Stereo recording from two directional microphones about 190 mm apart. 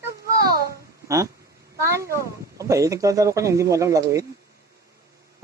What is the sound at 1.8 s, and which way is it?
Speech, 15° right (ahead or behind).